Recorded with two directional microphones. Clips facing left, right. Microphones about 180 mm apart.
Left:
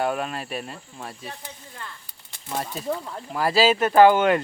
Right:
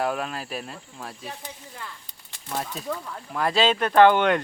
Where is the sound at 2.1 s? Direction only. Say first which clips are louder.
Left 2 dB; 5° left (ahead or behind).